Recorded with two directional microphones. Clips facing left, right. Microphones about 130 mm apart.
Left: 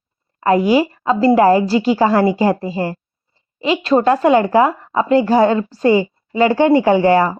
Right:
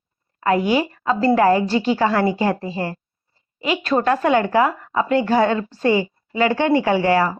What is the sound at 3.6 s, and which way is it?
A woman's voice, 30° left (ahead or behind).